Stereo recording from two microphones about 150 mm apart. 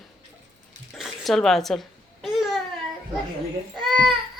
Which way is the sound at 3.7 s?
Centre (ahead or behind).